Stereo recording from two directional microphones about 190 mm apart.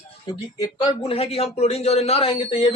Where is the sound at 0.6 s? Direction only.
20° left (ahead or behind).